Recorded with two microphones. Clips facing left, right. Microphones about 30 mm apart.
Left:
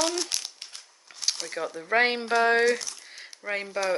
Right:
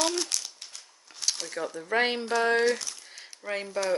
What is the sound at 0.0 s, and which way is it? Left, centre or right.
Speech, centre.